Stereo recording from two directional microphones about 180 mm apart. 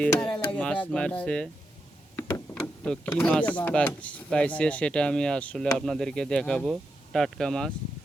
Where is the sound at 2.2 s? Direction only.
20° left (ahead or behind).